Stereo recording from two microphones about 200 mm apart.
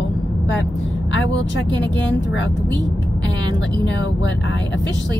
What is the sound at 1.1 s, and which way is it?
Speech, 65° left (ahead or behind).